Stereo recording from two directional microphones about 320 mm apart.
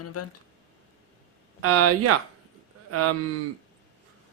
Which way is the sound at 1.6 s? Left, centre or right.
Right.